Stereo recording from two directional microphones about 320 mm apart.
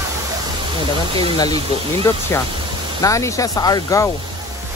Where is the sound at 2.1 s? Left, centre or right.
Centre.